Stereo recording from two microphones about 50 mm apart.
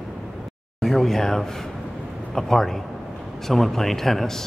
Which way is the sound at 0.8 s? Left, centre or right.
Centre.